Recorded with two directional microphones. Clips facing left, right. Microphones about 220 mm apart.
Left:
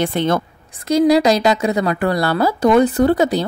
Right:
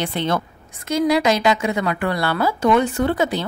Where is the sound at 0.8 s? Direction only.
35° left (ahead or behind).